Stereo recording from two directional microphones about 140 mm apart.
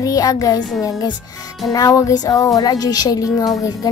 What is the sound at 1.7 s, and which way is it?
A child's voice, 25° left (ahead or behind).